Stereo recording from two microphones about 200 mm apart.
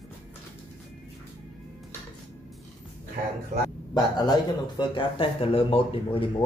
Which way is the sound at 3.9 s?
20° left (ahead or behind).